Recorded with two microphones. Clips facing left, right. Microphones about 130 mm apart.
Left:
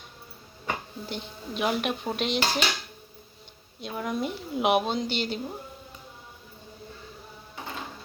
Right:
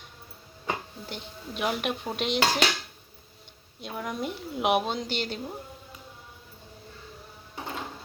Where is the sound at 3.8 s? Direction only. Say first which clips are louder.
Left 3 dB; centre (ahead or behind).